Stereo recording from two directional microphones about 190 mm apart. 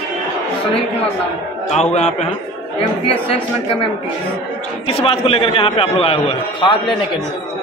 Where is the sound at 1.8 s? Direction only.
35° left (ahead or behind).